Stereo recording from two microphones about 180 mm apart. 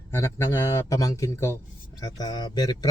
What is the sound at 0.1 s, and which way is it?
Speech, 15° left (ahead or behind).